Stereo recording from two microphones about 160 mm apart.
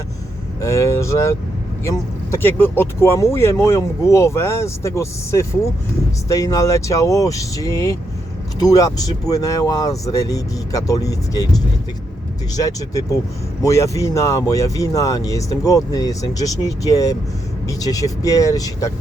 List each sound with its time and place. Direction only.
0.6 s speech: 20° left (ahead or behind)